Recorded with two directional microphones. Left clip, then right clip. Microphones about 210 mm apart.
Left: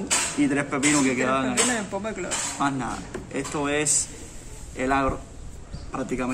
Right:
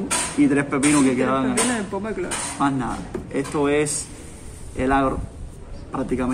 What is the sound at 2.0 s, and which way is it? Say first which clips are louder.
Speech: right 3 dB; 20° left (ahead or behind).